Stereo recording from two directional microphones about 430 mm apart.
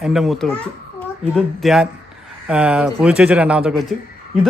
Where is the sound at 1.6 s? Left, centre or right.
Centre.